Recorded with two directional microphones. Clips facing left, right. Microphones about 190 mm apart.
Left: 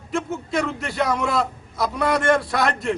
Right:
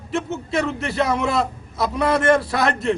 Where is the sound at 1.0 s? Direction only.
25° right (ahead or behind).